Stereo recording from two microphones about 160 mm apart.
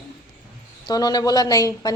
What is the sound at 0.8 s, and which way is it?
Speech, 25° left (ahead or behind).